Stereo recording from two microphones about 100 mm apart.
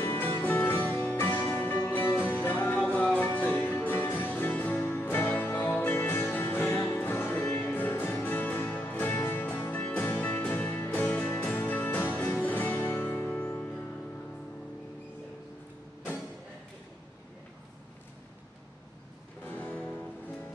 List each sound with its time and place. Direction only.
0.0 s music: 20° left (ahead or behind)
19.4 s music: 20° left (ahead or behind)